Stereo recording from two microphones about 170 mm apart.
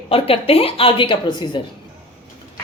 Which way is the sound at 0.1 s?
35° left (ahead or behind).